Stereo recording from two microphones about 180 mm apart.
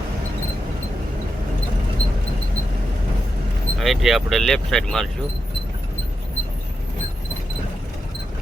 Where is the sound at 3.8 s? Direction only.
Centre (ahead or behind).